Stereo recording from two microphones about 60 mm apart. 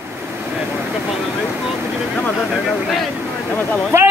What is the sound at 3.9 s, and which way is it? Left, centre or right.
Speech, right.